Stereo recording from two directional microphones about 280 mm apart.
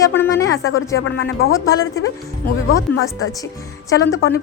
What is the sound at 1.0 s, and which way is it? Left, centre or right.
Speech, left.